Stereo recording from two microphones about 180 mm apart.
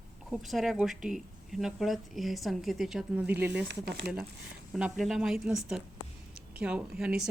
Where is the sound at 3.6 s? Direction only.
70° right (ahead or behind).